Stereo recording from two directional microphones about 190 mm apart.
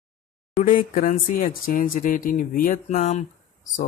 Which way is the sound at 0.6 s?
45° left (ahead or behind).